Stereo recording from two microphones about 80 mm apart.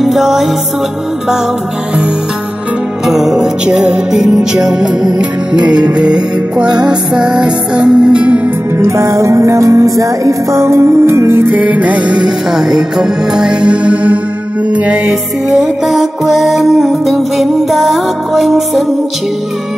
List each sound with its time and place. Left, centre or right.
0.0 s music: centre
3.1 s music: centre
8.7 s music: right; by 18.9 s centre